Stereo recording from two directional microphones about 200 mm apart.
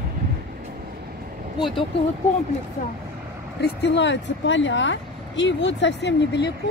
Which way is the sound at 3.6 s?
60° left (ahead or behind).